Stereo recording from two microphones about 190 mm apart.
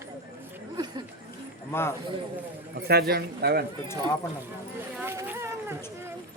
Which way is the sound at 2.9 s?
55° right (ahead or behind).